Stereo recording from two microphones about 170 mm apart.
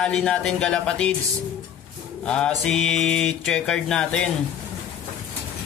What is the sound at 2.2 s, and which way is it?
Speech, 5° left (ahead or behind).